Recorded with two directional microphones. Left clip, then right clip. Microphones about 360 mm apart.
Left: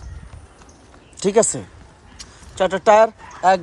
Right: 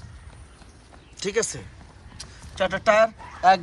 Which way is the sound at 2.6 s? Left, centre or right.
Centre.